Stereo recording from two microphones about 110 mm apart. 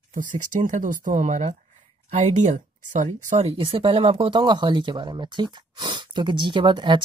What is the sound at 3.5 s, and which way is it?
Speech, 55° right (ahead or behind).